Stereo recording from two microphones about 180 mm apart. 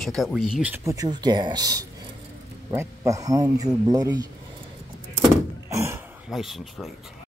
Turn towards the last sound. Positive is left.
turn(degrees=0)  # may be behind; listen again after turning